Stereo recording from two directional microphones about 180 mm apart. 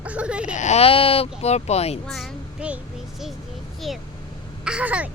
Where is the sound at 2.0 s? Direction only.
Centre (ahead or behind).